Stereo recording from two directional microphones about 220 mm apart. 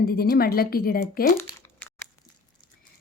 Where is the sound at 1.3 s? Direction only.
10° left (ahead or behind).